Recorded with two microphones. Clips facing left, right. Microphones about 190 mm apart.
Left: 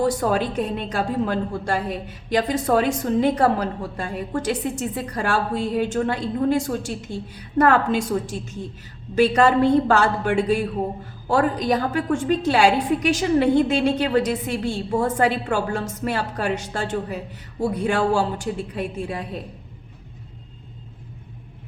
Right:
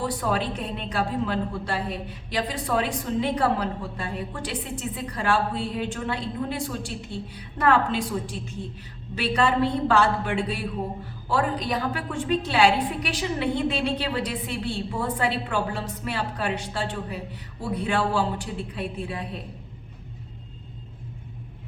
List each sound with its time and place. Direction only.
0.0 s a woman's voice: 45° left (ahead or behind)